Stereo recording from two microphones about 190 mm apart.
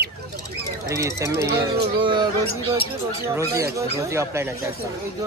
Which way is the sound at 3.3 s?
15° right (ahead or behind).